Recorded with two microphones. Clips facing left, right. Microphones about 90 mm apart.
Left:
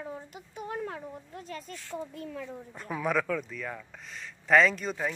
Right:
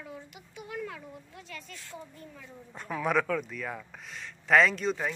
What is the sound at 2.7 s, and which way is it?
Speech, centre (ahead or behind).